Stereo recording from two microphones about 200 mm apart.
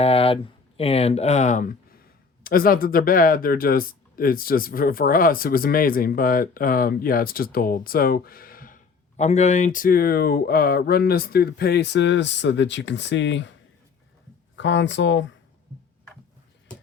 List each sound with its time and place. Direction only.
0.0 s speech: 30° left (ahead or behind); by 13.5 s 65° left (ahead or behind)
14.5 s speech: 65° left (ahead or behind)